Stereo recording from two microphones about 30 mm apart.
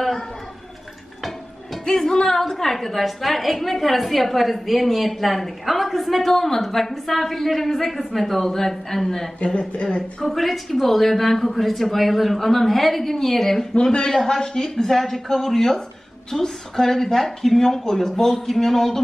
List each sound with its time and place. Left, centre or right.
1.9 s music: left
2.2 s a woman's voice: centre
9.4 s speech: left
10.2 s a woman's voice: centre
14.2 s speech: left
15.0 s a woman's voice: centre